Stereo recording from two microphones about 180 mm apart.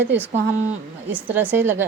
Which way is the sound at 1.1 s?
10° right (ahead or behind).